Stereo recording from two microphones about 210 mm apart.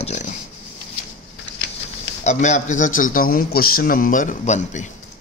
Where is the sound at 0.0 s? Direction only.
35° left (ahead or behind).